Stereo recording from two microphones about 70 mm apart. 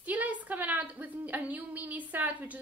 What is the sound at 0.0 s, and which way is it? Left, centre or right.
A woman's voice, right.